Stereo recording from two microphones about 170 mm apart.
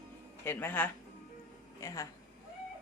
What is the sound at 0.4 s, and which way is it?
Speech, 10° left (ahead or behind).